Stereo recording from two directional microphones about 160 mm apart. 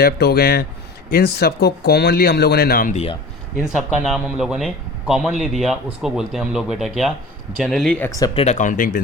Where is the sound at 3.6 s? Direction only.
5° right (ahead or behind).